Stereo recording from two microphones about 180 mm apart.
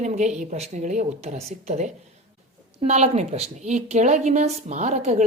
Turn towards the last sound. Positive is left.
turn(degrees=-40)  # may be behind; listen again after turning